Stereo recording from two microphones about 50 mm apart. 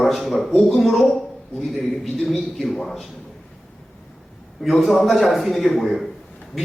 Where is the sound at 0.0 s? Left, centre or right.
Centre.